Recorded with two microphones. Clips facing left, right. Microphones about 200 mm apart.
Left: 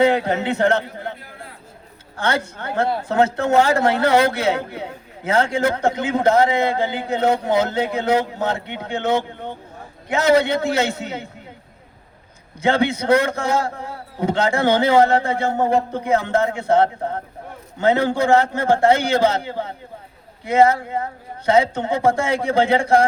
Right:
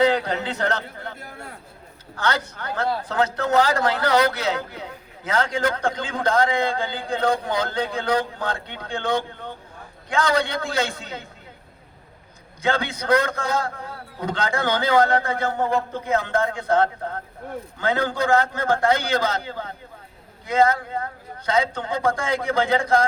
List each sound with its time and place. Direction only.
0.0 s speech: 25° left (ahead or behind)
2.1 s speech: 25° left (ahead or behind)
12.6 s speech: 25° left (ahead or behind)